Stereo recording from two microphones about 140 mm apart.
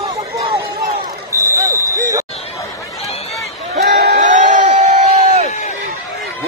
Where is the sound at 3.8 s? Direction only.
80° right; by 5.4 s 60° right (ahead or behind).